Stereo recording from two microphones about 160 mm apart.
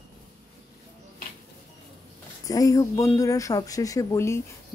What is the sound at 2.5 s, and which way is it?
Speech, 20° left (ahead or behind).